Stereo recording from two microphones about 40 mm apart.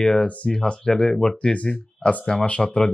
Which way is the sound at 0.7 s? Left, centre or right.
Centre.